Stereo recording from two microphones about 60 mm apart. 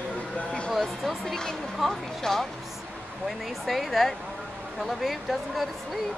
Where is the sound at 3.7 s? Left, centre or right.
Centre.